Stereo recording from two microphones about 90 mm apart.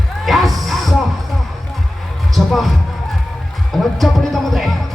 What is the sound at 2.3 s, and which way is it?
Music, centre (ahead or behind).